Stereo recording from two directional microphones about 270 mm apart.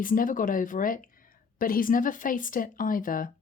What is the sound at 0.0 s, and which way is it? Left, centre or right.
Speech, left.